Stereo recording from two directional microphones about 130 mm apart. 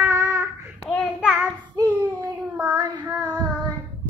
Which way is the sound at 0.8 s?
5° right (ahead or behind).